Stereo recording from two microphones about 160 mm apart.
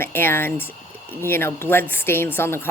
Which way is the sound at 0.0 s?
15° left (ahead or behind).